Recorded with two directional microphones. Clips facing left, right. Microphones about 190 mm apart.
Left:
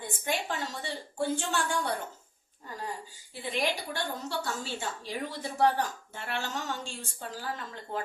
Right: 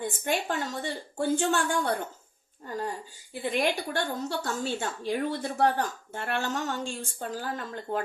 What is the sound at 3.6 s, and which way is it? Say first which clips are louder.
A woman's voice: right 3 dB; 50° right (ahead or behind).